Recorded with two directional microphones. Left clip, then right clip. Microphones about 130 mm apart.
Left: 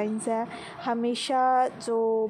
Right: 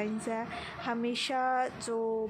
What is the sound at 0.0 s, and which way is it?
A woman's voice, 20° left (ahead or behind).